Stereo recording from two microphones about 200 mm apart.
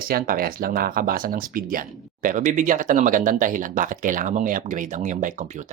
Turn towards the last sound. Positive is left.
turn(degrees=-40)  # may be behind; listen again after turning